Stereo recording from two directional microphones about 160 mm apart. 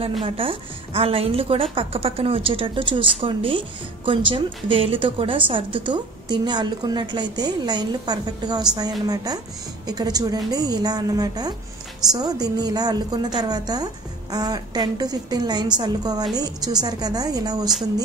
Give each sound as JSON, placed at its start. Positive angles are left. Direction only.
{"t": 0.2, "sound": "a woman's voice", "side_deg": -35}